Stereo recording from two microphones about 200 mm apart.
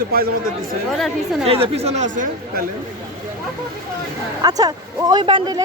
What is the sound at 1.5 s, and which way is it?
Speech, 30° right (ahead or behind).